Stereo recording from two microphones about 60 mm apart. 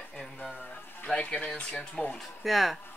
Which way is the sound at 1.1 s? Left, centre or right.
Centre.